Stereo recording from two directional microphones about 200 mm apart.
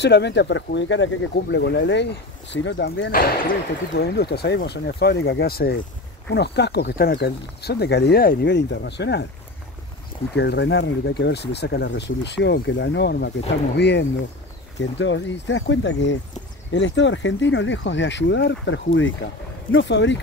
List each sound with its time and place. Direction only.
0.0 s speech: 60° left (ahead or behind)
3.1 s speech: 45° left (ahead or behind)
10.3 s speech: 60° left (ahead or behind)